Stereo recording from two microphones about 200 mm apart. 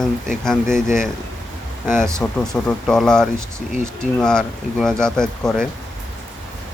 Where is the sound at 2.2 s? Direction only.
5° left (ahead or behind).